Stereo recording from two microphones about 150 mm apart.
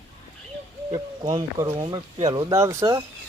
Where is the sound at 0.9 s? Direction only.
25° right (ahead or behind).